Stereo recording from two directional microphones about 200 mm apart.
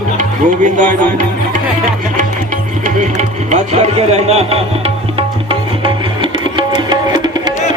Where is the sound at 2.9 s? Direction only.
35° right (ahead or behind); by 7.5 s 20° right (ahead or behind).